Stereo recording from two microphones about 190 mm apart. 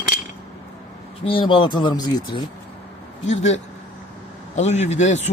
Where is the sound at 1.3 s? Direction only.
25° left (ahead or behind).